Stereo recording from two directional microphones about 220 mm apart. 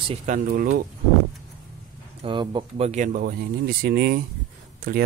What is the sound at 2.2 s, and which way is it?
Speech, 20° right (ahead or behind).